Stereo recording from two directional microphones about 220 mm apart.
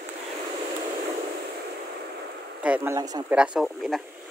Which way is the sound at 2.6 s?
10° right (ahead or behind).